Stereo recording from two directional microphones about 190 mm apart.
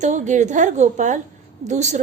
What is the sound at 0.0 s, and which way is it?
A woman's voice, 40° right (ahead or behind).